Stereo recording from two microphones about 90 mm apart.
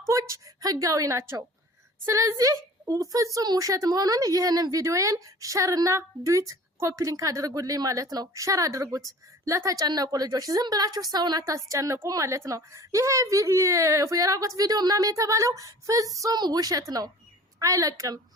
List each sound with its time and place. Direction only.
0.0 s a woman's voice: 35° right (ahead or behind)
11.4 s a woman's voice: 35° right (ahead or behind)